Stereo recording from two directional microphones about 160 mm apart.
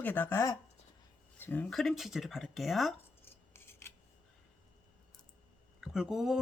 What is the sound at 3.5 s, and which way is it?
Scissors, 15° left (ahead or behind).